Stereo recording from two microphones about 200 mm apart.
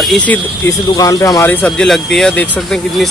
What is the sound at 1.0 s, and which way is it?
Speech, 20° left (ahead or behind).